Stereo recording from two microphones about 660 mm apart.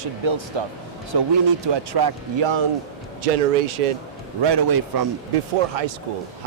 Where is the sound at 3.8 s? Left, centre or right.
Right.